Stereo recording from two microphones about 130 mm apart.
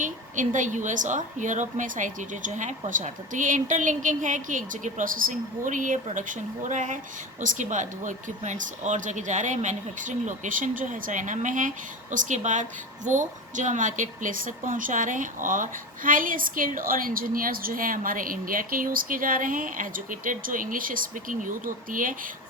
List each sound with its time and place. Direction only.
0.0 s a woman's voice: 80° right